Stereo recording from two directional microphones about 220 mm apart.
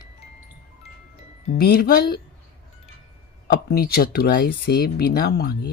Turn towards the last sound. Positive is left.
turn(degrees=45)  # may be behind; listen again after turning